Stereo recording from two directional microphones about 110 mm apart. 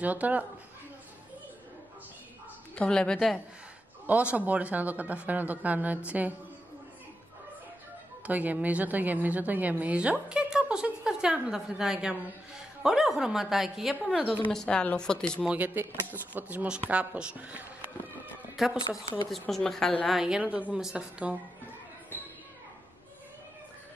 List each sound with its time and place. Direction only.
0.0 s a woman's voice: 15° right (ahead or behind)
2.7 s a woman's voice: 10° left (ahead or behind)
4.1 s a woman's voice: 10° right (ahead or behind)
8.3 s a woman's voice: 15° right (ahead or behind); by 15.4 s 5° left (ahead or behind)
15.4 s a woman's voice: 15° right (ahead or behind)